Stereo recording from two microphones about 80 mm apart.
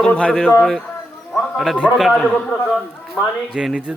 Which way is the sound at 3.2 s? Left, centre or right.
Centre.